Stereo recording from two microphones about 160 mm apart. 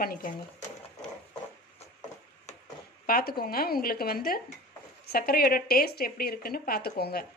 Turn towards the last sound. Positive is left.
turn(degrees=70)  # may be behind; listen again after turning